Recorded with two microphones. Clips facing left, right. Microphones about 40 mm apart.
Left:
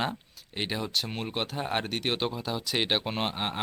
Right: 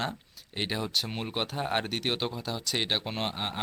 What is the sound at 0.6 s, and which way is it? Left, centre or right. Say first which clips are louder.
Speech: even; centre.